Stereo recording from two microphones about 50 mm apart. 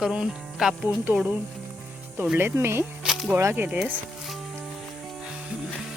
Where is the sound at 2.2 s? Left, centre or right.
Right.